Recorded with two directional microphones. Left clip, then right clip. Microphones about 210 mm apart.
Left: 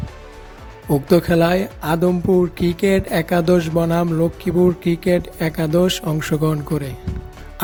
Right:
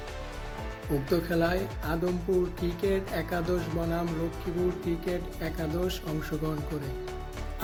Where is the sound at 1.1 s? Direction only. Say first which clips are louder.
Left 12 dB; 50° left (ahead or behind).